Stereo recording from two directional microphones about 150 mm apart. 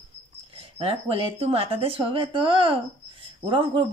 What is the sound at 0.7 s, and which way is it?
Speech, 40° right (ahead or behind).